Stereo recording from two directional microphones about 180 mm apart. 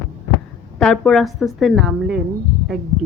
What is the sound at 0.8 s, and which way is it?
Speech, centre (ahead or behind).